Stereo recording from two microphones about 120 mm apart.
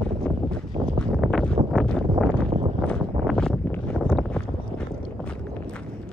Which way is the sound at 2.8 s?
5° left (ahead or behind).